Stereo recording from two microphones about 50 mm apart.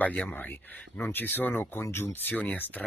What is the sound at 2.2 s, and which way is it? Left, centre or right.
Speech, left.